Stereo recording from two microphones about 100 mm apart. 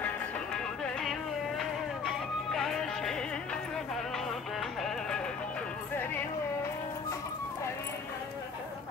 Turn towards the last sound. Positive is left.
turn(degrees=25)  # may be behind; listen again after turning